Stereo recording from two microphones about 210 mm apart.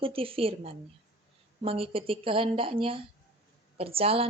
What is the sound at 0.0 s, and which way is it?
A woman's voice, 25° right (ahead or behind).